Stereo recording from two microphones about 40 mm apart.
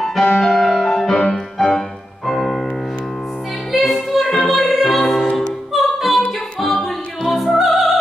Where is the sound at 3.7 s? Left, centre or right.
Centre.